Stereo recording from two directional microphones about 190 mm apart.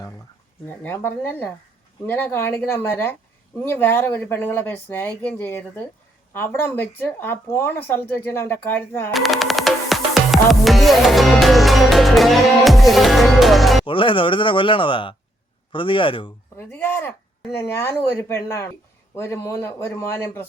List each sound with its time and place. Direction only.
0.7 s speech: 10° left (ahead or behind)
9.1 s music: centre (ahead or behind)
13.8 s speech: 25° left (ahead or behind)
16.6 s speech: 10° left (ahead or behind)